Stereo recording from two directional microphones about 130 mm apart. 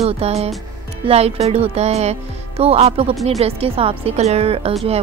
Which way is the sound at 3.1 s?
Centre (ahead or behind).